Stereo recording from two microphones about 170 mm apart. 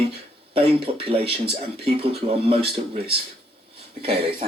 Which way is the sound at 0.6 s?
35° right (ahead or behind).